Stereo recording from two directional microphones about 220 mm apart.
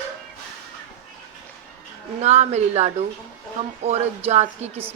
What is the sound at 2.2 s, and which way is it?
Speech, 30° right (ahead or behind).